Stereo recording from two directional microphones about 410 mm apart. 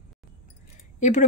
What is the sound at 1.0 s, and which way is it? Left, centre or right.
Speech, centre.